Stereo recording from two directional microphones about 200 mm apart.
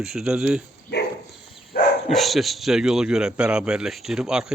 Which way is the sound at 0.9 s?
60° left (ahead or behind).